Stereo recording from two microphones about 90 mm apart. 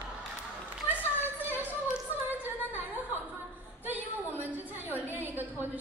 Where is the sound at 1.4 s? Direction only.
25° right (ahead or behind).